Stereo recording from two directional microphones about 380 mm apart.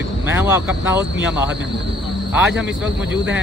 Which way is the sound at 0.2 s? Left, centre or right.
Centre.